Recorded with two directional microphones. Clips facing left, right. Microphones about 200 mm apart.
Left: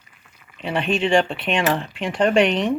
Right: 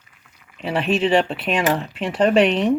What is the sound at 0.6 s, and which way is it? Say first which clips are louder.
Speech: right 2 dB; 5° right (ahead or behind).